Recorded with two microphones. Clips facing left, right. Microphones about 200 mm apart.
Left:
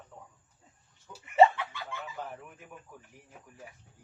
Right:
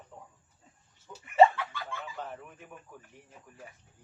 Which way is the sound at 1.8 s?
10° left (ahead or behind).